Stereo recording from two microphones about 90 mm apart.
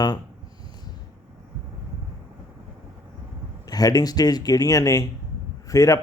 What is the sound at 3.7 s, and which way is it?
Speech, 45° left (ahead or behind).